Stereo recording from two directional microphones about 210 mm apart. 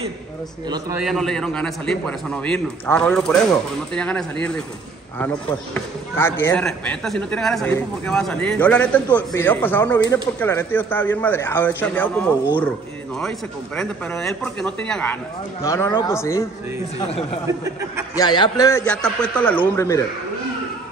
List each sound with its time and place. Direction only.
0.9 s a man's voice: centre (ahead or behind)
6.1 s speech: 10° left (ahead or behind)
13.7 s a man's voice: 5° left (ahead or behind)
18.1 s speech: 20° left (ahead or behind)
18.9 s a man's voice: 5° left (ahead or behind)